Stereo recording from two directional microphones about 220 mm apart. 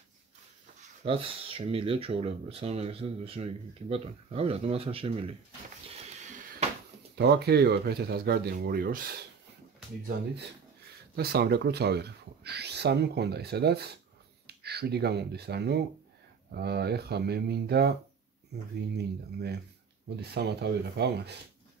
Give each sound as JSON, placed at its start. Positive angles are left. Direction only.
{"t": 1.0, "sound": "speech", "side_deg": -25}
{"t": 7.2, "sound": "speech", "side_deg": -50}
{"t": 11.1, "sound": "speech", "side_deg": -45}